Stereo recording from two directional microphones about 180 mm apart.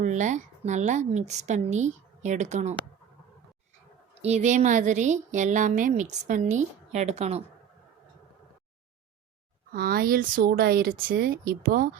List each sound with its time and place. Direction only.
0.0 s a woman's voice: 40° right (ahead or behind)
4.2 s a woman's voice: 40° right (ahead or behind)
9.7 s speech: 55° right (ahead or behind)